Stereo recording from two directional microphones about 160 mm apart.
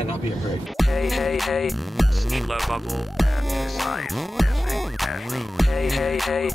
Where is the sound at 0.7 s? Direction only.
Centre (ahead or behind).